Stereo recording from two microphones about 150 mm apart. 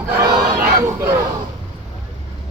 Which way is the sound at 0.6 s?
15° right (ahead or behind).